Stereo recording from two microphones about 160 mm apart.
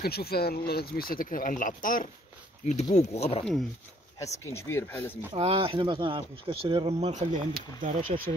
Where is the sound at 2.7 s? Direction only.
45° left (ahead or behind).